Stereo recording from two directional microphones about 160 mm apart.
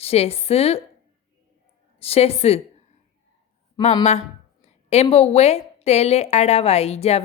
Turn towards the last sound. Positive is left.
turn(degrees=40)  # may be behind; listen again after turning